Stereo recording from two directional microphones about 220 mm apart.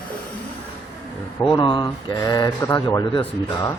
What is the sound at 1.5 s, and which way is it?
Speech, 20° left (ahead or behind).